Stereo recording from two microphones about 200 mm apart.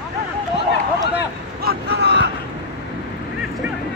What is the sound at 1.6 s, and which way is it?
Vehicle, 50° right (ahead or behind).